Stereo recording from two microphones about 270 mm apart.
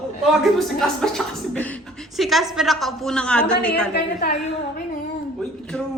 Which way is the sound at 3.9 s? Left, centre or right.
Left.